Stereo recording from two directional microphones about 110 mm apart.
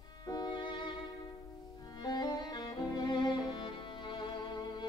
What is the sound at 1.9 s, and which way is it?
Violin, 40° left (ahead or behind).